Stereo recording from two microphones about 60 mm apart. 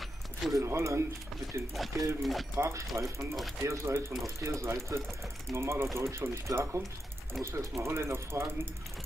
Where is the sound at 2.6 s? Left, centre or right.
Right.